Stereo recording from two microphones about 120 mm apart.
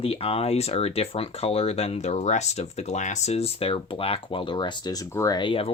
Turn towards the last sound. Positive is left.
turn(degrees=45)  # may be behind; listen again after turning